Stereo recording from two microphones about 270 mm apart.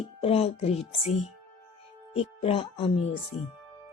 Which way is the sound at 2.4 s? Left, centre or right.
Left.